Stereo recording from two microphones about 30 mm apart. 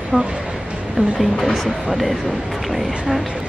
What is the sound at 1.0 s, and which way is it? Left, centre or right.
Speech, right.